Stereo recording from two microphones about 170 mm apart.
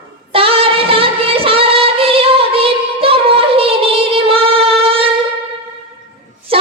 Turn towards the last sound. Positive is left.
turn(degrees=-35)  # may be behind; listen again after turning